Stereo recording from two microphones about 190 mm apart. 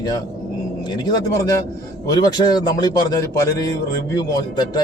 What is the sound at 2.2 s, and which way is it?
A man's voice, 20° left (ahead or behind).